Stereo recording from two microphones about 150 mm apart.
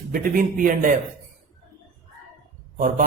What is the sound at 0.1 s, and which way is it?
Speech, 65° right (ahead or behind).